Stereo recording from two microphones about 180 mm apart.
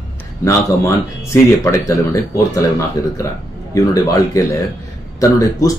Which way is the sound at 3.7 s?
15° left (ahead or behind).